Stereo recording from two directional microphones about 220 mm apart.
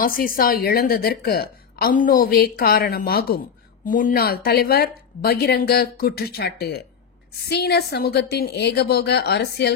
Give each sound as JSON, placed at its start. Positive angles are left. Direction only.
{"t": 0.0, "sound": "a woman's voice", "side_deg": 40}